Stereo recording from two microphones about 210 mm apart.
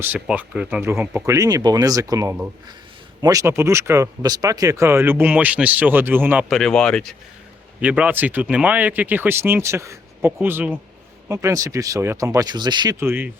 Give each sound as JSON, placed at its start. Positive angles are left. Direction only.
{"t": 0.0, "sound": "speech", "side_deg": -10}
{"t": 6.6, "sound": "speech", "side_deg": 5}